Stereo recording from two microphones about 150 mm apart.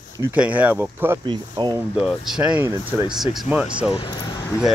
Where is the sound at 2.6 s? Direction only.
20° right (ahead or behind).